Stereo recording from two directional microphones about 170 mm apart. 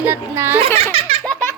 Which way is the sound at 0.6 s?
35° right (ahead or behind).